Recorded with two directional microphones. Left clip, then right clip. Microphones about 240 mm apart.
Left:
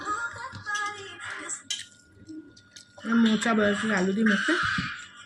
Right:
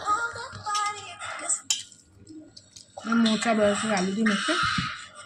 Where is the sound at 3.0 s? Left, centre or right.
Right.